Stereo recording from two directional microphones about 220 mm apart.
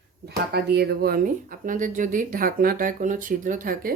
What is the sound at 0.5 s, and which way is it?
Speech, 50° right (ahead or behind).